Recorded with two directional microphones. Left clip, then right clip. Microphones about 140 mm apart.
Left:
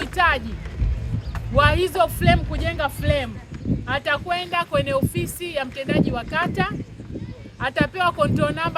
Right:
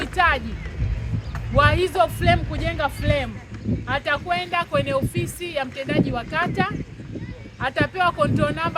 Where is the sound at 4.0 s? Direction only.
45° left (ahead or behind).